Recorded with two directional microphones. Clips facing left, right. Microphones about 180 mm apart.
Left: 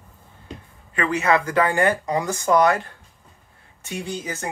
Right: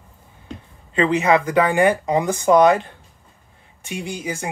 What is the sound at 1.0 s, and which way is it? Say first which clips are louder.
Speech: right 4 dB; 20° right (ahead or behind).